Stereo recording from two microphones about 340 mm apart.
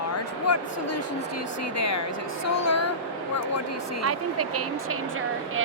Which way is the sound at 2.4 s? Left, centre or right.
Left.